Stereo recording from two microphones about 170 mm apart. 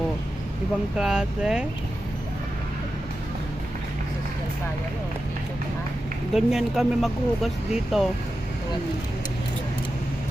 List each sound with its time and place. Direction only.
0.9 s speech: 5° right (ahead or behind)
6.3 s speech: centre (ahead or behind)